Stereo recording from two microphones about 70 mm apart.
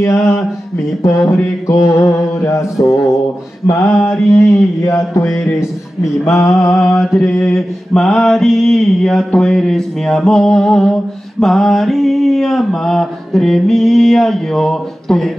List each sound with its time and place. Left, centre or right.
0.2 s mantra: centre
1.0 s mantra: left
4.1 s mantra: centre
4.5 s mantra: left
6.7 s mantra: centre